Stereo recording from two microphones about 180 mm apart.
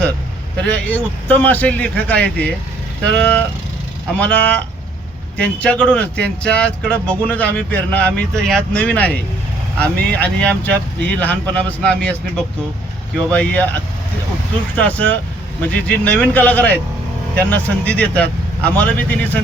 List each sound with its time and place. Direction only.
0.6 s speech: 5° left (ahead or behind)
14.8 s speech: 10° left (ahead or behind)